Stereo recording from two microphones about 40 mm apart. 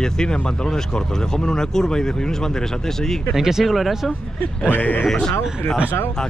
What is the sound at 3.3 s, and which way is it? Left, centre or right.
Speech, centre.